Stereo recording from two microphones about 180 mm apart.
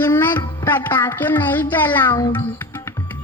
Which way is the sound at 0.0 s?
10° left (ahead or behind).